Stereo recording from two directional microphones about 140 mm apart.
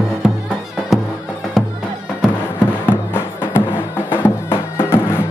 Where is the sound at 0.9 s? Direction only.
Centre (ahead or behind).